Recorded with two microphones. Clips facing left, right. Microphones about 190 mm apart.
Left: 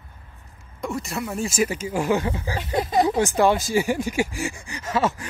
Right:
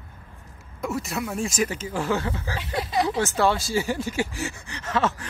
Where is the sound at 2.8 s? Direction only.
50° left (ahead or behind).